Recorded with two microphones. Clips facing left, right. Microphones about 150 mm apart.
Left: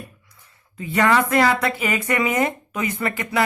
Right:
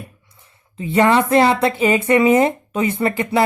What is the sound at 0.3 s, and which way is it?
Speech, 25° right (ahead or behind).